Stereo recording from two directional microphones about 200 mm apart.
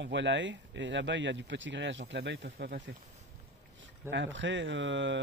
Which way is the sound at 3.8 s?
65° right (ahead or behind).